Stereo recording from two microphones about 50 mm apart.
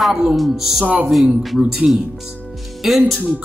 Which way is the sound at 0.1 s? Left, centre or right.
Centre.